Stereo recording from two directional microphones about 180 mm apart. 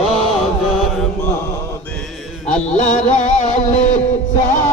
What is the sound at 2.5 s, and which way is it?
Music, 40° left (ahead or behind).